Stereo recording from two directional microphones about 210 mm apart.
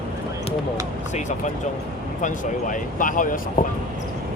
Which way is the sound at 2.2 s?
35° left (ahead or behind).